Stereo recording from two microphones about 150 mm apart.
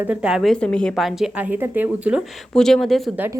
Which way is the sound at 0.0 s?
5° right (ahead or behind).